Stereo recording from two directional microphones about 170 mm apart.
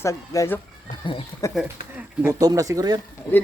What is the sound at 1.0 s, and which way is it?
Speech, 30° left (ahead or behind).